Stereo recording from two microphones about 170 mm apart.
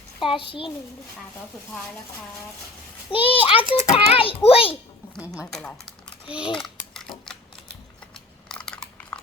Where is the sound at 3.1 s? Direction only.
30° left (ahead or behind).